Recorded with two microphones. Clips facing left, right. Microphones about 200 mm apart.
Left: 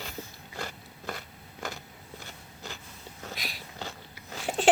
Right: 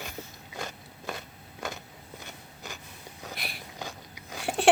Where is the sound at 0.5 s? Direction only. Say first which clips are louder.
Even; 20° right (ahead or behind).